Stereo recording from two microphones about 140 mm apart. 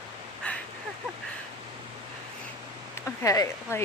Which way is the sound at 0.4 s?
10° left (ahead or behind).